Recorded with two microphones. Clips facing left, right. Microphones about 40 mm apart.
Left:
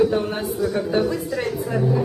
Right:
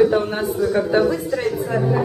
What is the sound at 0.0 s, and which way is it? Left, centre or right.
A woman's voice, centre.